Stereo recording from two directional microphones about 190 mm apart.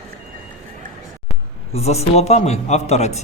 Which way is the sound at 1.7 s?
35° left (ahead or behind).